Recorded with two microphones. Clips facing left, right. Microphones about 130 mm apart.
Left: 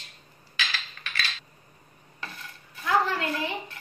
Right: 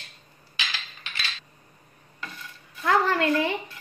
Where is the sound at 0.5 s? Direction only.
20° right (ahead or behind).